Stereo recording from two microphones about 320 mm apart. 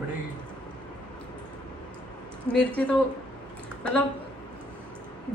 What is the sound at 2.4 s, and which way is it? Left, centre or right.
Speech, centre.